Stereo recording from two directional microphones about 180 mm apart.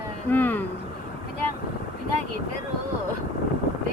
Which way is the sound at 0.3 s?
10° left (ahead or behind).